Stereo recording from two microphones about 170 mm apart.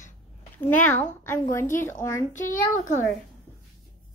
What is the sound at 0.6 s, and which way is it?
Speech, 10° left (ahead or behind).